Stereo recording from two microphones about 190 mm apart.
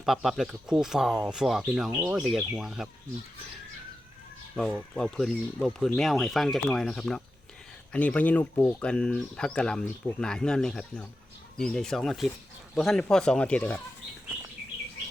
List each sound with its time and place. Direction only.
0.0 s speech: centre (ahead or behind)
1.9 s speech: 15° right (ahead or behind)
2.1 s speech: centre (ahead or behind)
4.5 s speech: 5° left (ahead or behind)